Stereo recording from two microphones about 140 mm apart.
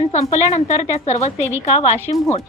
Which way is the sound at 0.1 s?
55° left (ahead or behind).